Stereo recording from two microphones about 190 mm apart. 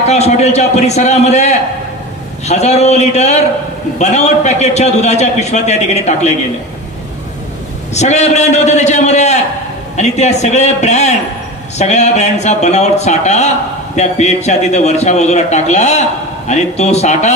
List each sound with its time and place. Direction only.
0.1 s a man's voice: 35° left (ahead or behind)
7.9 s a man's voice: 35° left (ahead or behind)